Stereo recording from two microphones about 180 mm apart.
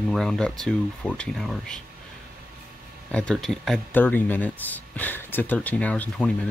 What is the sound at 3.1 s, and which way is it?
Speech, 5° left (ahead or behind).